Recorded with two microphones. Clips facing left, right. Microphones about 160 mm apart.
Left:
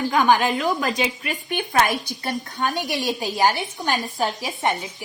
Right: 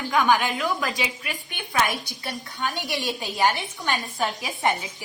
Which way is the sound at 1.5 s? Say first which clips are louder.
Left 5 dB; 55° left (ahead or behind).